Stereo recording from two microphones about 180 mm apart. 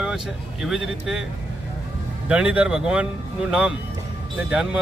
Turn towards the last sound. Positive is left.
turn(degrees=-5)  # may be behind; listen again after turning